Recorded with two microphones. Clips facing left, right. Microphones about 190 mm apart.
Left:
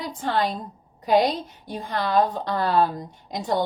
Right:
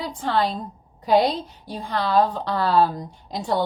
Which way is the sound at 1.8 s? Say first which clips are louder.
Right 1 dB; 50° left (ahead or behind).